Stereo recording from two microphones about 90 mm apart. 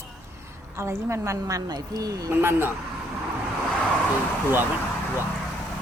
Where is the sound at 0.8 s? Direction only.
30° right (ahead or behind).